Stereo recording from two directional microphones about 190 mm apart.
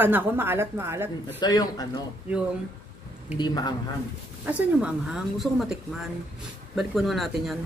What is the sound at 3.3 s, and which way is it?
Speech, 20° left (ahead or behind).